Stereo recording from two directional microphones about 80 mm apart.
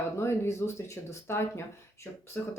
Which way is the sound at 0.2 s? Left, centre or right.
Left.